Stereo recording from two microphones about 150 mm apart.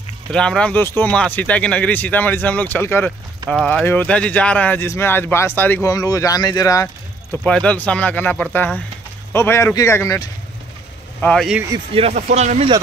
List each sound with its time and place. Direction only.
0.3 s speech: 5° left (ahead or behind); by 6.9 s 25° left (ahead or behind)
7.4 s speech: 10° left (ahead or behind)
11.1 s speech: 10° left (ahead or behind)
11.9 s speech: 40° right (ahead or behind)
12.2 s speech: 55° right (ahead or behind)